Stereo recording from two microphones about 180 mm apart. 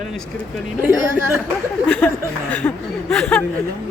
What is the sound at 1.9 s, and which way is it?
Speech, 5° left (ahead or behind).